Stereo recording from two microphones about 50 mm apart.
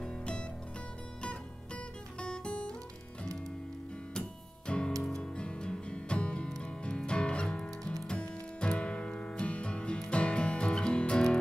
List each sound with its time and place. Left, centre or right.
0.0 s music: centre
2.1 s music: centre
4.6 s music: centre